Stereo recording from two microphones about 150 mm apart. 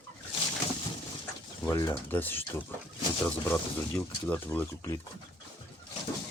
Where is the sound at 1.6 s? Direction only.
15° left (ahead or behind).